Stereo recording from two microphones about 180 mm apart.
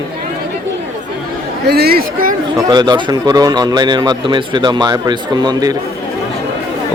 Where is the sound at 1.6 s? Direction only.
60° right (ahead or behind).